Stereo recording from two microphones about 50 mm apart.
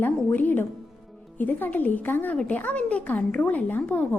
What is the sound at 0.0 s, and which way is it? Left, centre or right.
Music, left.